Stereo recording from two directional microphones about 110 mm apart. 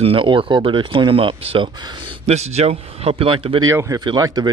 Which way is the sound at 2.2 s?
80° right.